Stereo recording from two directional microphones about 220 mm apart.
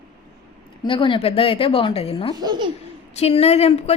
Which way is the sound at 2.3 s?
20° right (ahead or behind).